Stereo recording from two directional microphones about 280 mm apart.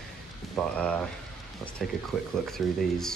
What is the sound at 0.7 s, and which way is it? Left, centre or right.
Speech, centre.